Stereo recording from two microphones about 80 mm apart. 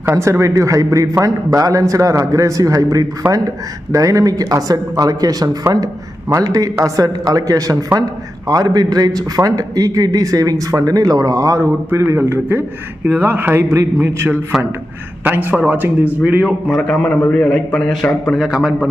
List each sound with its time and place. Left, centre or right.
0.2 s a man's voice: right; by 16.6 s centre
16.6 s a man's voice: centre
18.3 s a man's voice: centre